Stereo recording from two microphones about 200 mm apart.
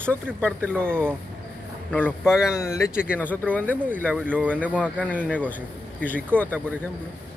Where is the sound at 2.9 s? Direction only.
5° right (ahead or behind).